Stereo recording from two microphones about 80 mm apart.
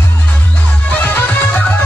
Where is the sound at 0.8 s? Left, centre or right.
Left.